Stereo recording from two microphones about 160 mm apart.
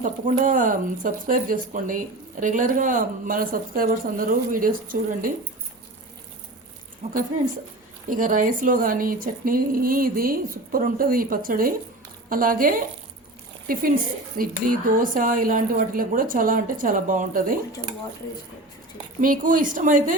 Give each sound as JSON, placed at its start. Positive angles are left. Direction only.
{"t": 0.0, "sound": "speech", "side_deg": -55}
{"t": 8.1, "sound": "speech", "side_deg": -55}
{"t": 14.3, "sound": "speech", "side_deg": -60}
{"t": 19.2, "sound": "speech", "side_deg": -60}